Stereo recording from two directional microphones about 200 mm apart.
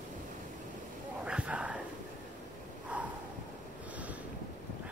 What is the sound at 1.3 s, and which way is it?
Whispering, 5° right (ahead or behind).